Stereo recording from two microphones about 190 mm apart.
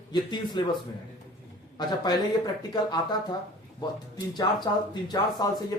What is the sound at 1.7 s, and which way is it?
Speech, 20° left (ahead or behind).